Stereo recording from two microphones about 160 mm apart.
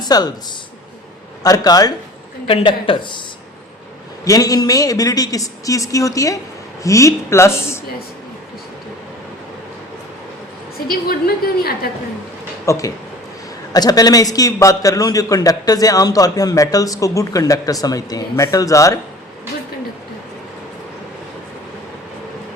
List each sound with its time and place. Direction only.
0.0 s speech: 25° left (ahead or behind)
1.5 s a man's voice: 25° left (ahead or behind)
2.5 s speech: 35° left (ahead or behind)
4.3 s a man's voice: 20° left (ahead or behind)
10.8 s a woman's voice: 70° left (ahead or behind)
12.6 s a man's voice: 20° left (ahead or behind)